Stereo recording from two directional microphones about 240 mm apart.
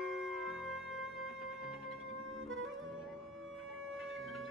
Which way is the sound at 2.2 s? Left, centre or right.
Right.